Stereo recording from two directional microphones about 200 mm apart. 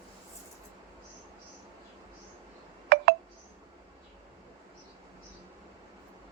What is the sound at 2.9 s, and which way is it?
Telephone dialing, 55° right (ahead or behind).